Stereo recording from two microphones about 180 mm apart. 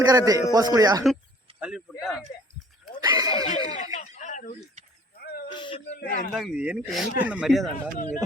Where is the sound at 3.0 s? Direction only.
20° right (ahead or behind).